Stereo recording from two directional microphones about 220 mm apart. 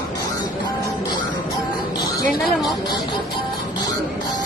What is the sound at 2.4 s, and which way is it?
Speech, centre (ahead or behind).